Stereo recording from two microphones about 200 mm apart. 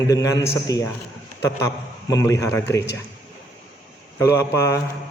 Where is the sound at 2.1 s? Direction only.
15° left (ahead or behind).